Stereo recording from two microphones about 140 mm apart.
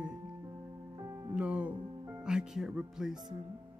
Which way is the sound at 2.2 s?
5° right (ahead or behind).